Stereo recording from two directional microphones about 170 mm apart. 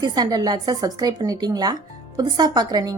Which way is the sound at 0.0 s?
25° right (ahead or behind).